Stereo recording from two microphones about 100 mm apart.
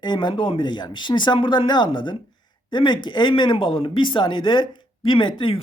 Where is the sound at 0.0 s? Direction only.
50° left (ahead or behind).